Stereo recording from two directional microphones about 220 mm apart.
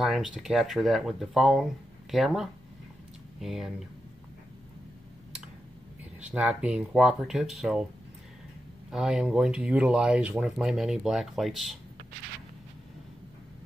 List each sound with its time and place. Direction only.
0.0 s speech: centre (ahead or behind)
6.2 s speech: 5° right (ahead or behind)
8.9 s speech: 5° right (ahead or behind)